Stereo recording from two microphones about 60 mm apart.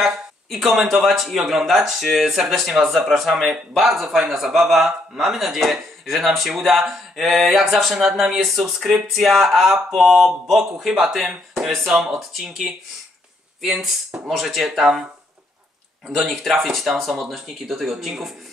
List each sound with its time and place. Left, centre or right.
0.0 s speech: centre
16.2 s speech: centre